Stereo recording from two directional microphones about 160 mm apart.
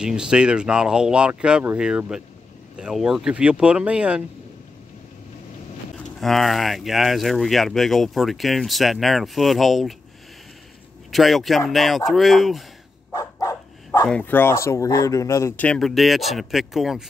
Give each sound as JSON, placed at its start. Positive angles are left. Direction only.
{"t": 0.0, "sound": "speech", "side_deg": -5}
{"t": 6.1, "sound": "speech", "side_deg": 0}
{"t": 11.1, "sound": "speech", "side_deg": 0}
{"t": 13.1, "sound": "dog", "side_deg": 20}
{"t": 14.0, "sound": "speech", "side_deg": 10}